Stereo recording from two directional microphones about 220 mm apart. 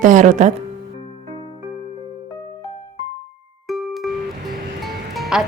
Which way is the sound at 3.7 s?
Centre (ahead or behind).